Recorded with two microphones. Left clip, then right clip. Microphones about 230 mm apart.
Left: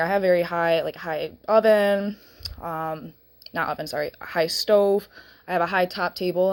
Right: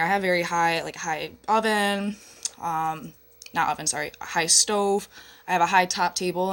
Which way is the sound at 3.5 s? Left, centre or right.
Centre.